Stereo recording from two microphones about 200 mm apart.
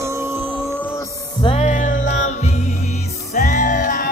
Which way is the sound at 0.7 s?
10° left (ahead or behind).